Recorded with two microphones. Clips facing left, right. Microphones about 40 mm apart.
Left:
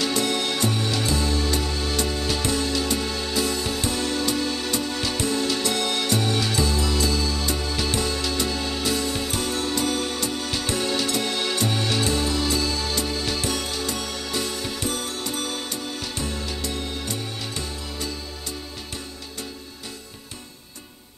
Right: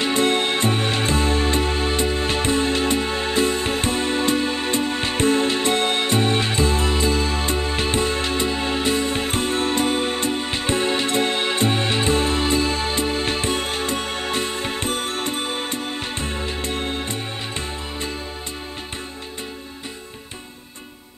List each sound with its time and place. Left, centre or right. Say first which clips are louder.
0.0 s music: right 5 dB; right